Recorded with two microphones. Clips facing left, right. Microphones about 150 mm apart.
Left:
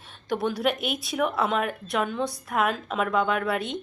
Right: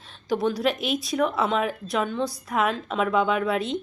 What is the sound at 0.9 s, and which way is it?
A woman's voice, centre (ahead or behind).